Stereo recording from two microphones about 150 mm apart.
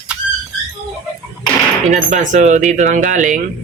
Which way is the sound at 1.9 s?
55° right (ahead or behind).